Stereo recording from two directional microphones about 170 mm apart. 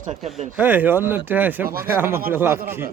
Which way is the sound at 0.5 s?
10° right (ahead or behind).